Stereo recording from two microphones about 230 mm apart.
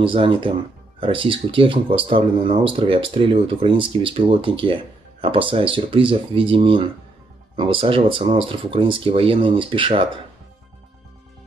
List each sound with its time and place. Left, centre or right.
0.0 s speech: right